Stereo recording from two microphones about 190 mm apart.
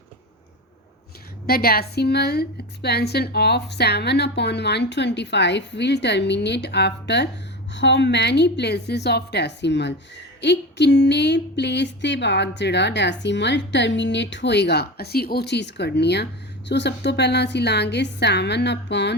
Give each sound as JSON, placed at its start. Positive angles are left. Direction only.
{"t": 1.5, "sound": "a woman's voice", "side_deg": 50}